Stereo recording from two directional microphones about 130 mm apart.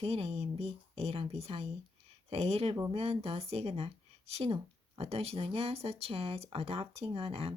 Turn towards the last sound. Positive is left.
turn(degrees=-45)  # may be behind; listen again after turning